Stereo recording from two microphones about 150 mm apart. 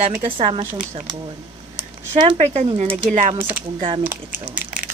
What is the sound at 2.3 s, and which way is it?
A woman's voice, 45° right (ahead or behind).